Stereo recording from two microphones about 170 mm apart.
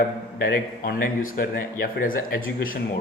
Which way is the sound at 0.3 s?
65° left (ahead or behind).